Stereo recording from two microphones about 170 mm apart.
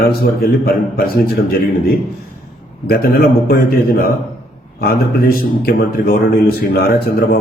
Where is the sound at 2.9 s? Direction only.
65° left (ahead or behind).